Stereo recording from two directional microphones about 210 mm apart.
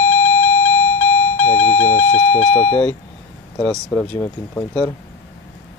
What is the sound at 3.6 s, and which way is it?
Speech, 5° left (ahead or behind).